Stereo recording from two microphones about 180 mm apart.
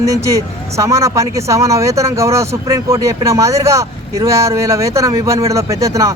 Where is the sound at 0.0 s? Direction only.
15° right (ahead or behind).